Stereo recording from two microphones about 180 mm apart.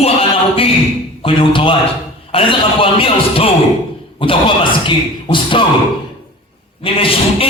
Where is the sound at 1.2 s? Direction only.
30° left (ahead or behind).